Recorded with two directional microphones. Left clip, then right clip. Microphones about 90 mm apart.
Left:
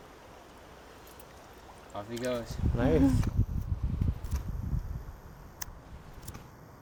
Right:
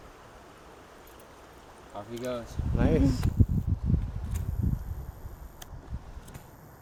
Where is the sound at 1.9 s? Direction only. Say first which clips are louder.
Left 1 dB; 5° left (ahead or behind).